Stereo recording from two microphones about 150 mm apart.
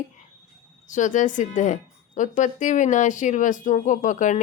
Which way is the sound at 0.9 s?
55° left (ahead or behind).